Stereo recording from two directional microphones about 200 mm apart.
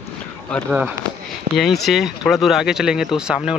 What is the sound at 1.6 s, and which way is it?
Speech, centre (ahead or behind).